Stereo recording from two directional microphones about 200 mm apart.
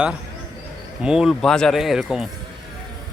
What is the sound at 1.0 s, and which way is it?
Speech, 5° right (ahead or behind).